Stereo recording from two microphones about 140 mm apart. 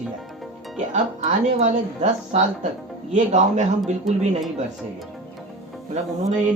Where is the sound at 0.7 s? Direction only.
60° right (ahead or behind).